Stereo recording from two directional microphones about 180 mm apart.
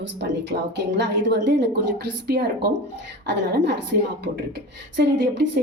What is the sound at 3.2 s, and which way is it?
Speech, 70° right (ahead or behind).